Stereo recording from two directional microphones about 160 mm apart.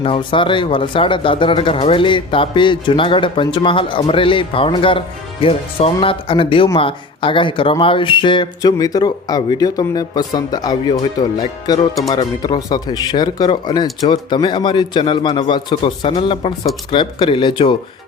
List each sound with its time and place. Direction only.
0.0 s speech: 35° left (ahead or behind)